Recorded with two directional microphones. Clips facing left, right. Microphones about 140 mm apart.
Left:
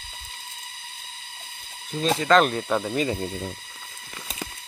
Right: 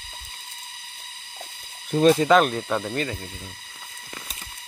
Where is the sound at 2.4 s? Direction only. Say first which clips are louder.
Left 1 dB; centre (ahead or behind).